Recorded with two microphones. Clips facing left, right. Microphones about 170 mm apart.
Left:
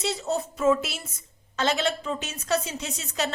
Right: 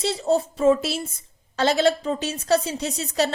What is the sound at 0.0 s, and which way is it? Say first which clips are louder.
A woman's voice: right 6 dB; 30° right (ahead or behind).